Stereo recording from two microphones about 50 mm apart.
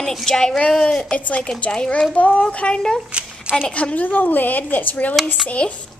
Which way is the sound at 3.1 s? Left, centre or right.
Right.